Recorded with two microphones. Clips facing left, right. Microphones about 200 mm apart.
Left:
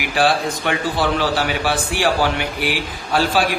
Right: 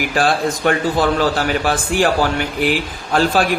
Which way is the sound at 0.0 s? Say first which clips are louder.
Right 1 dB; 45° right (ahead or behind).